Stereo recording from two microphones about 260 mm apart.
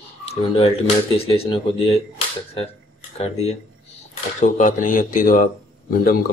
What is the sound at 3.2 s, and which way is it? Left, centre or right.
Speech, left.